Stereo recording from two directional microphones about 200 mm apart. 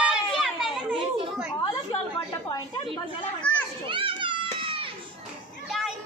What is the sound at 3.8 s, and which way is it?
Children playing, 25° right (ahead or behind).